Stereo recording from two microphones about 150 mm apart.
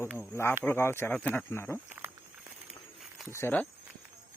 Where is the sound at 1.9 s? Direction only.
10° right (ahead or behind).